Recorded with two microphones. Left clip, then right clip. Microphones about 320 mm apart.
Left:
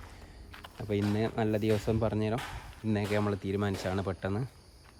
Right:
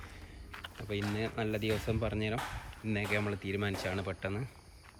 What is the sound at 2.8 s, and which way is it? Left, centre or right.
Speech, left.